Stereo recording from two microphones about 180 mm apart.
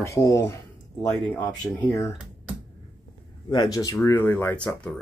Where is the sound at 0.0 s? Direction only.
15° left (ahead or behind).